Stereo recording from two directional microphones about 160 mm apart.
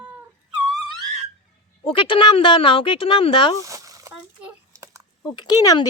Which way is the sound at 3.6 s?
20° right (ahead or behind).